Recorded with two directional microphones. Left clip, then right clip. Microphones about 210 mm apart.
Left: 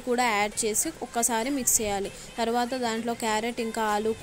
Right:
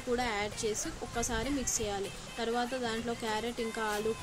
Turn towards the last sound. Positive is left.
turn(degrees=30)  # may be behind; listen again after turning